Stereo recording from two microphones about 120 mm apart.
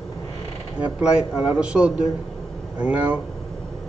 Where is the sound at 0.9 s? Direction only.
10° right (ahead or behind).